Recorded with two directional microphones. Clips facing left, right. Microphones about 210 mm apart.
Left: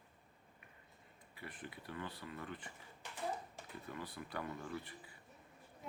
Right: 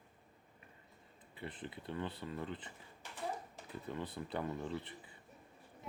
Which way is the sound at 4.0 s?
25° right (ahead or behind).